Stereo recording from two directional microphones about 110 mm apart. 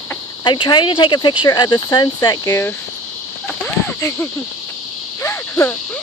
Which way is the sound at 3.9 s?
25° left (ahead or behind).